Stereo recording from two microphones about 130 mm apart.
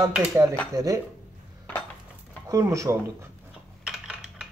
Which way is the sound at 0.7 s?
25° right (ahead or behind).